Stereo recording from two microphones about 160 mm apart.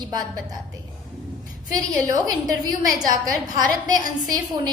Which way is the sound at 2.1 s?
25° right (ahead or behind).